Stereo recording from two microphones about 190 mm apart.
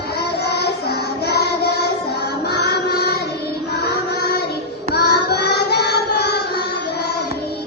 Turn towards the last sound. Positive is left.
turn(degrees=60)  # may be behind; listen again after turning